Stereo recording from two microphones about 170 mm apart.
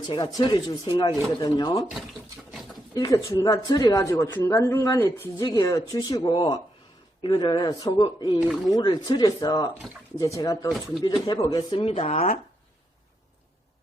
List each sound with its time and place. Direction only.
0.1 s speech: 25° left (ahead or behind)
2.9 s speech: 20° left (ahead or behind)
5.5 s speech: 25° left (ahead or behind)
10.7 s speech: centre (ahead or behind)
11.0 s speech: 20° left (ahead or behind)